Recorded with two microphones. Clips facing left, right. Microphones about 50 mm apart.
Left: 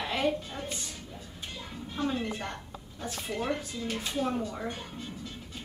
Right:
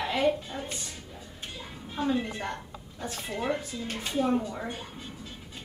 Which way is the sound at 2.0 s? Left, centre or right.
Centre.